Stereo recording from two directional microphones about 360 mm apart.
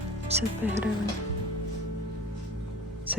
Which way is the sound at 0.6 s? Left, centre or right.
Centre.